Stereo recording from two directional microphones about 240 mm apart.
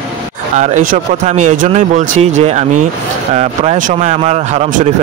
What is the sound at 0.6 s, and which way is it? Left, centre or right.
Speech, right.